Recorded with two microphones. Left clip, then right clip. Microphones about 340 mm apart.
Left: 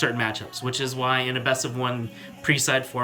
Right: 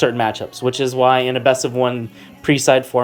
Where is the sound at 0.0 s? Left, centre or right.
Centre.